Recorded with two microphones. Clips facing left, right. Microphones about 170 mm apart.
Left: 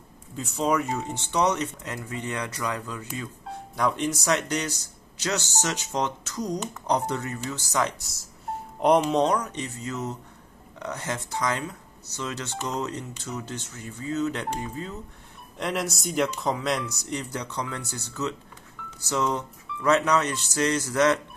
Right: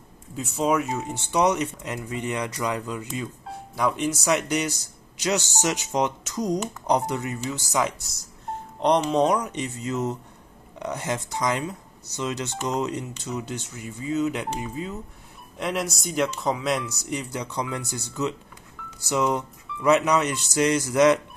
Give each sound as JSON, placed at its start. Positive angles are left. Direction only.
{"t": 0.4, "sound": "speech", "side_deg": -5}
{"t": 3.7, "sound": "speech", "side_deg": -5}